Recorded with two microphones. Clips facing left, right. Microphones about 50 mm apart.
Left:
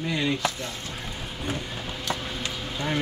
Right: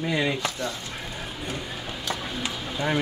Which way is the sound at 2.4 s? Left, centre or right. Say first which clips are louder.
Right 3 dB; centre.